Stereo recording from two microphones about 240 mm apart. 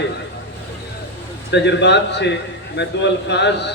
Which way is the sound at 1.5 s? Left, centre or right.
Left.